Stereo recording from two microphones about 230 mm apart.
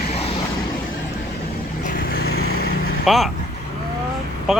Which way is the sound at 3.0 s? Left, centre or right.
Centre.